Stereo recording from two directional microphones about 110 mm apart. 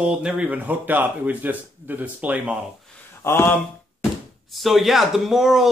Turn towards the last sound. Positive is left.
turn(degrees=0)  # may be behind; listen again after turning